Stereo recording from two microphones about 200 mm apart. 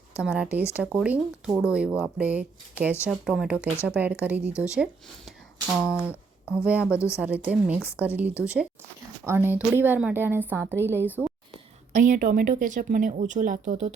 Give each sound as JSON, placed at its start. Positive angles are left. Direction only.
{"t": 0.1, "sound": "a woman's voice", "side_deg": -5}
{"t": 11.9, "sound": "speech", "side_deg": -40}